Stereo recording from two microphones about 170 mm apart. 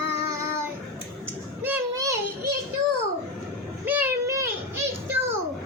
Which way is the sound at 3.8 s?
10° right (ahead or behind).